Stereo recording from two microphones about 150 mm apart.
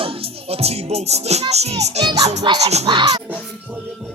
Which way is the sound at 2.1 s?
25° right (ahead or behind).